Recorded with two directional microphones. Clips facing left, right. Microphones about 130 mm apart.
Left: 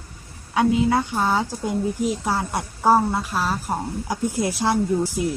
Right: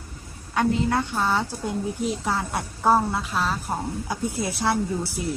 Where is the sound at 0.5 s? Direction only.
10° left (ahead or behind).